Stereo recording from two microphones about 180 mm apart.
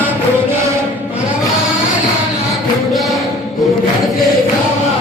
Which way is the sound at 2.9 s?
Centre (ahead or behind).